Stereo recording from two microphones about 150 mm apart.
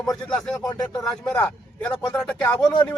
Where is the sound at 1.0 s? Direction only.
5° left (ahead or behind).